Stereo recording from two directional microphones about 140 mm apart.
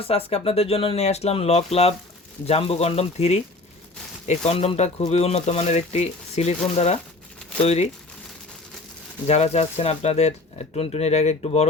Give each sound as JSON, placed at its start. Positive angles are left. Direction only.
{"t": 0.0, "sound": "speech", "side_deg": 45}
{"t": 9.2, "sound": "speech", "side_deg": 50}